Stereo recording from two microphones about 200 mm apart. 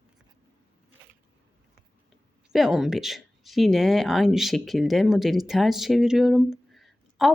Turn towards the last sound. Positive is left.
turn(degrees=0)  # may be behind; listen again after turning